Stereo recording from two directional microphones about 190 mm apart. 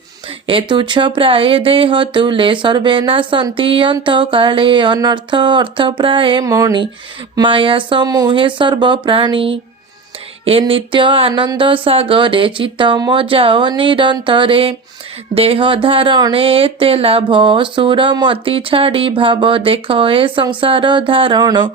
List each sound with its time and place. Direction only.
0.4 s speech: 25° right (ahead or behind)
10.6 s speech: 25° right (ahead or behind)